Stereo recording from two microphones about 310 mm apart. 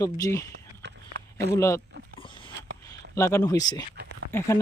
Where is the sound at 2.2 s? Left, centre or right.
Centre.